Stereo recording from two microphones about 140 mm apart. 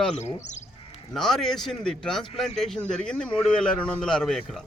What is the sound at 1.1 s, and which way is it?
A man's voice, centre (ahead or behind).